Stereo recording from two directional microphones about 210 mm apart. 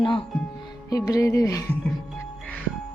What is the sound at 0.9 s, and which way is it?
Music, 15° left (ahead or behind).